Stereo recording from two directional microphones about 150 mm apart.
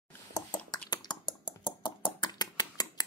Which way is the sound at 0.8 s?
30° left (ahead or behind).